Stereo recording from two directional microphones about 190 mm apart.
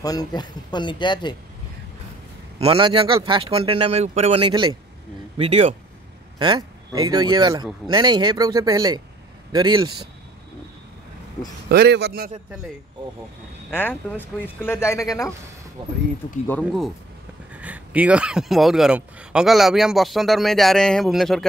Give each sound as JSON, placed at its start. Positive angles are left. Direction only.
{"t": 0.0, "sound": "speech", "side_deg": 20}
{"t": 2.6, "sound": "speech", "side_deg": -30}
{"t": 11.7, "sound": "a man's voice", "side_deg": -60}
{"t": 13.7, "sound": "speech", "side_deg": 10}
{"t": 15.8, "sound": "speech", "side_deg": -25}
{"t": 16.4, "sound": "speech", "side_deg": 5}
{"t": 17.6, "sound": "speech", "side_deg": -10}